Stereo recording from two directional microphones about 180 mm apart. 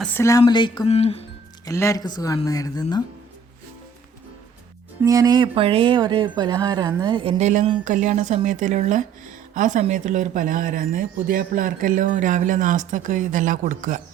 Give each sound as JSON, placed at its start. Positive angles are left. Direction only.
{"t": 0.0, "sound": "speech", "side_deg": 15}
{"t": 1.6, "sound": "speech", "side_deg": 15}
{"t": 5.0, "sound": "speech", "side_deg": -20}